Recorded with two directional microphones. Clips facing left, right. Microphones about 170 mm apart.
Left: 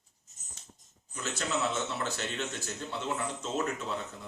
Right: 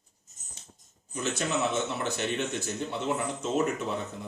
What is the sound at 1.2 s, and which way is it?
Speech, 15° right (ahead or behind).